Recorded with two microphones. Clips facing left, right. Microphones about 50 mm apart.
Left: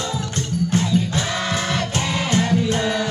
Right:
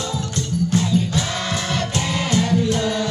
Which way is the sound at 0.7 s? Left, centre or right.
Left.